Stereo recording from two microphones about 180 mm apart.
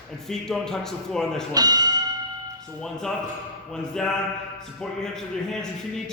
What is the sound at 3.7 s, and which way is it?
A man's voice, 5° left (ahead or behind).